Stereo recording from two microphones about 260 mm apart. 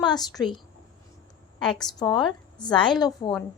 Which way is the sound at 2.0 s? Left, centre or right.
Centre.